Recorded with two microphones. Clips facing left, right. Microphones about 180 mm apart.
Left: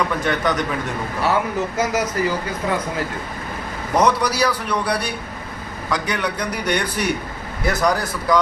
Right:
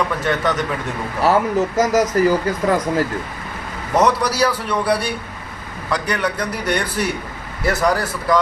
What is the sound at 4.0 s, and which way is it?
A man's voice, 5° right (ahead or behind).